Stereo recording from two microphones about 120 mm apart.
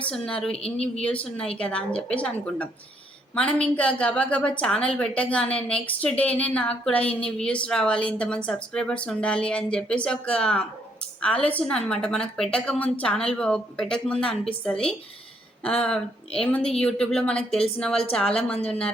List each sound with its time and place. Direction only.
0.0 s a woman's voice: 10° left (ahead or behind)
0.5 s speech: 55° left (ahead or behind)
1.0 s a woman's voice: 10° left (ahead or behind)
16.4 s a woman's voice: 5° left (ahead or behind)